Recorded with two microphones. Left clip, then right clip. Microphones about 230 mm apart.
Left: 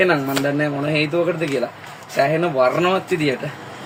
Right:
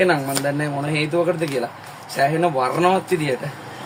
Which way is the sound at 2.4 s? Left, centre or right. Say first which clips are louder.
Left 1 dB; centre.